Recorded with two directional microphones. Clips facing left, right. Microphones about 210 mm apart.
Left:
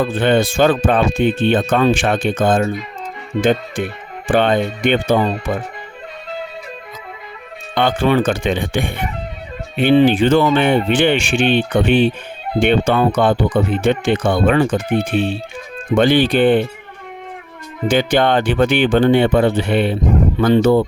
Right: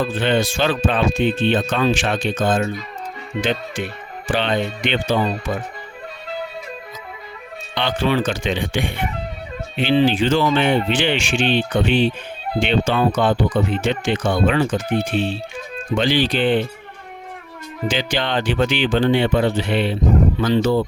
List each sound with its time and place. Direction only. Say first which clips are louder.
0.0 s speech: left 4 dB; 55° left (ahead or behind)
7.8 s speech: left 5 dB; 50° left (ahead or behind)
17.8 s speech: left 8 dB; 55° left (ahead or behind)